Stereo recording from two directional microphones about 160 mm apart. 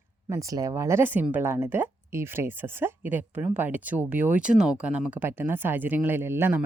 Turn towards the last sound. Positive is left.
turn(degrees=-15)  # may be behind; listen again after turning